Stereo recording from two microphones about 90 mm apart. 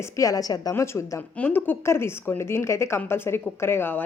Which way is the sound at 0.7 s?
30° left (ahead or behind).